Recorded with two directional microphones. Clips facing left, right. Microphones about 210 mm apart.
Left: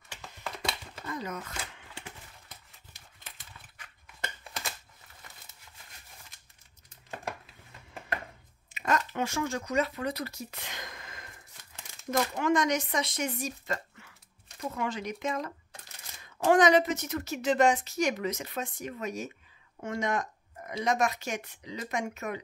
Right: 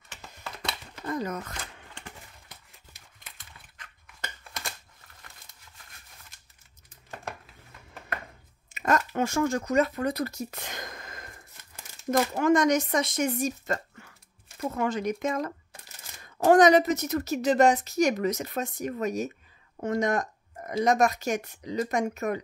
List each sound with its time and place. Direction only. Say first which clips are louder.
1.0 s speech: right 6 dB; 45° right (ahead or behind)
1.6 s a sound: even; 10° left (ahead or behind)
8.7 s a woman's voice: right 4 dB; 45° right (ahead or behind)